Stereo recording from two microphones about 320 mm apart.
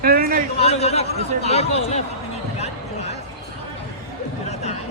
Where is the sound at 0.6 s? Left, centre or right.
Centre.